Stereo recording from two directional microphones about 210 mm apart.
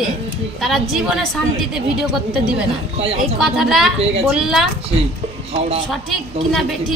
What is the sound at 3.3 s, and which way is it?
A woman's voice, centre (ahead or behind).